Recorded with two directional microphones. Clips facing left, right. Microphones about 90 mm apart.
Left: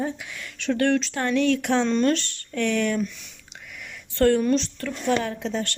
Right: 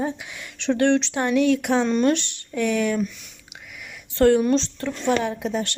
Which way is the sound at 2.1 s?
20° right (ahead or behind).